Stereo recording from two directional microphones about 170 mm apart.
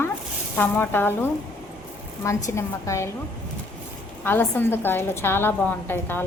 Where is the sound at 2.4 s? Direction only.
15° left (ahead or behind).